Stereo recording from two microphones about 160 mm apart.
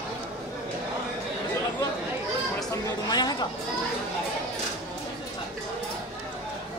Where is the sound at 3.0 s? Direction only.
25° left (ahead or behind).